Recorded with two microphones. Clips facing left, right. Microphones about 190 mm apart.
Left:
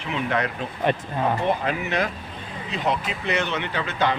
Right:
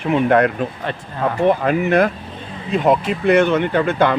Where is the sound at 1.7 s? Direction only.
50° right (ahead or behind).